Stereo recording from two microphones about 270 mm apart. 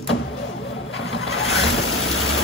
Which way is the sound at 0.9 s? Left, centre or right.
Left.